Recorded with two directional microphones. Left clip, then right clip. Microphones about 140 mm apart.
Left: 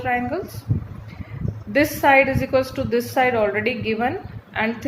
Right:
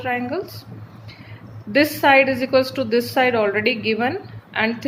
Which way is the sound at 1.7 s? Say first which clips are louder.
Right 1 dB; 35° right (ahead or behind).